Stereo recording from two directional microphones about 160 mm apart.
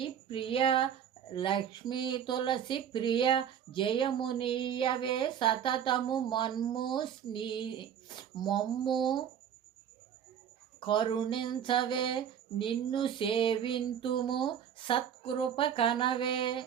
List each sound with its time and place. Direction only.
0.0 s female singing: 35° left (ahead or behind)
1.3 s speech: 30° left (ahead or behind)
10.8 s speech: 30° left (ahead or behind)